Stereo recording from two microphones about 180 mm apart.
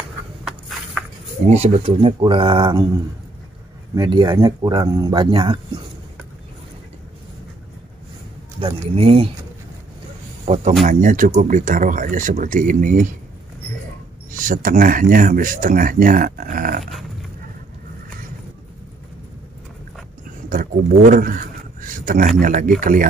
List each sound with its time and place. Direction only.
1.5 s speech: 35° right (ahead or behind)
3.9 s speech: 20° right (ahead or behind)
8.9 s speech: 30° right (ahead or behind)
10.4 s speech: 40° right (ahead or behind)
14.3 s speech: 50° right (ahead or behind)
20.4 s a sound: 50° right (ahead or behind)
22.4 s speech: 50° right (ahead or behind)